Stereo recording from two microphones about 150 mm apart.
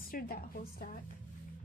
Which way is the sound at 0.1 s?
75° left (ahead or behind).